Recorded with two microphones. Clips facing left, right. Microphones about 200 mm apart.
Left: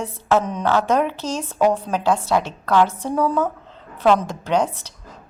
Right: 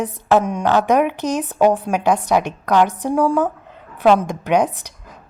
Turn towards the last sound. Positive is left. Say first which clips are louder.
# even
turn(degrees=-15)  # may be behind; listen again after turning